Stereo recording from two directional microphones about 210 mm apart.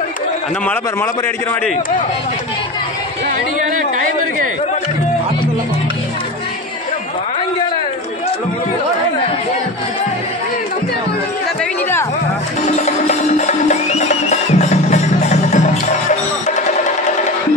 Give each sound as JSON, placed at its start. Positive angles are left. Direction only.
{"t": 12.7, "sound": "music", "side_deg": 35}